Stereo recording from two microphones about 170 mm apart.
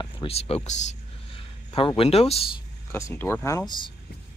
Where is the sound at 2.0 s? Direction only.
35° left (ahead or behind).